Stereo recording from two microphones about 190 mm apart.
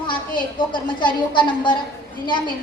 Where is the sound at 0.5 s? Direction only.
25° left (ahead or behind).